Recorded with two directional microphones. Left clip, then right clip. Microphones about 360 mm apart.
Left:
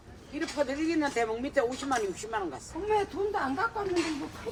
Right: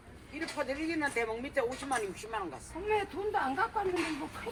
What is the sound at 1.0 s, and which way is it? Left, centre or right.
Speech, left.